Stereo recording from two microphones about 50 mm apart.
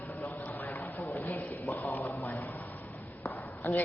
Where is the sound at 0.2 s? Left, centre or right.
Left.